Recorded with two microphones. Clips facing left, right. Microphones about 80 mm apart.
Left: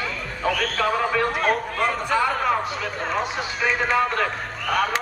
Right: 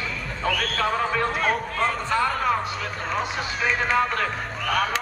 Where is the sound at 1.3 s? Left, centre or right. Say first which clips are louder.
Left 2 dB; centre.